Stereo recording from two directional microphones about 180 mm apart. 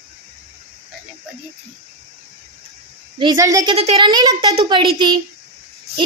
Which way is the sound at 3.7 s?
30° right (ahead or behind).